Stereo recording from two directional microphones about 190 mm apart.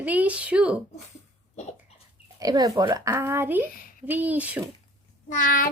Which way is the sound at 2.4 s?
20° right (ahead or behind).